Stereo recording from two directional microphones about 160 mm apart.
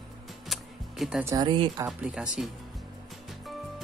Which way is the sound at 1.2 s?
25° right (ahead or behind).